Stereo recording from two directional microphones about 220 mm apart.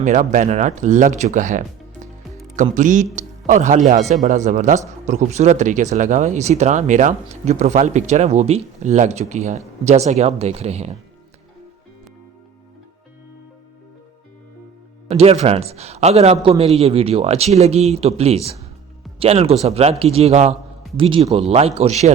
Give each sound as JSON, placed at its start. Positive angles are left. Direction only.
{"t": 0.0, "sound": "a man's voice", "side_deg": -35}
{"t": 15.1, "sound": "a man's voice", "side_deg": -30}